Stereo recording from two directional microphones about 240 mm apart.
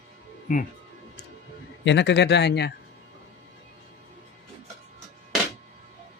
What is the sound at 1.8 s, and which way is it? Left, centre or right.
Speech, left.